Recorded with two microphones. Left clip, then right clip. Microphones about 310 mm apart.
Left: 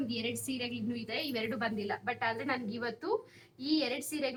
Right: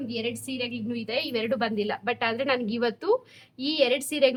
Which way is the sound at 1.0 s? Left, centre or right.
Right.